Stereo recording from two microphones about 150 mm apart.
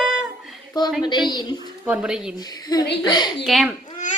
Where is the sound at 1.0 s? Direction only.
30° left (ahead or behind).